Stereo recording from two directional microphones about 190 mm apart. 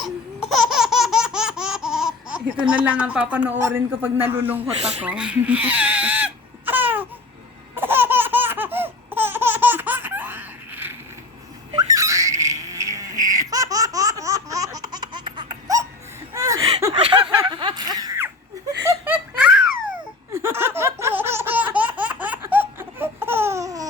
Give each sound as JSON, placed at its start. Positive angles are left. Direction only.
{"t": 0.0, "sound": "laughter", "side_deg": 0}
{"t": 3.6, "sound": "a man's voice", "side_deg": -15}
{"t": 4.8, "sound": "speech", "side_deg": -35}
{"t": 5.0, "sound": "crying", "side_deg": -5}
{"t": 7.8, "sound": "laughter", "side_deg": -10}
{"t": 11.7, "sound": "a sound", "side_deg": -20}
{"t": 16.3, "sound": "chuckle", "side_deg": -20}
{"t": 16.9, "sound": "a sound", "side_deg": -30}
{"t": 18.9, "sound": "giggle", "side_deg": -10}
{"t": 20.3, "sound": "laughter", "side_deg": -15}